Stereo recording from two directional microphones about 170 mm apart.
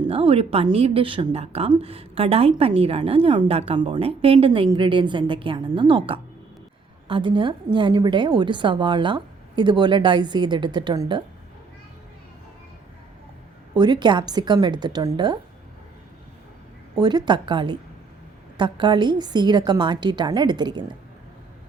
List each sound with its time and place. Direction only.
0.1 s a woman's voice: 35° right (ahead or behind)
13.7 s a woman's voice: 25° right (ahead or behind)
16.9 s a woman's voice: 25° right (ahead or behind)